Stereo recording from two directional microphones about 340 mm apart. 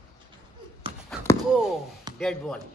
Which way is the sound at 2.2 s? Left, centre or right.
Centre.